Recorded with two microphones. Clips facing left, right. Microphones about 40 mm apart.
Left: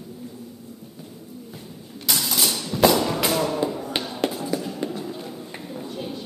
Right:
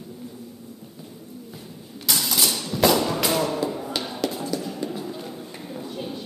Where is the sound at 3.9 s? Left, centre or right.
Left.